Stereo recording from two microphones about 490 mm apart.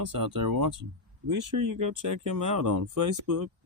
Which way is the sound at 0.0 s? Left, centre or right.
Right.